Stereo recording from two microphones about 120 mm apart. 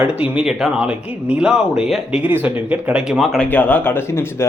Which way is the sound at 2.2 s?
15° right (ahead or behind).